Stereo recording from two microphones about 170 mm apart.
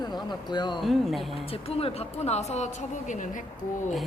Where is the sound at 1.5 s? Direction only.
35° left (ahead or behind).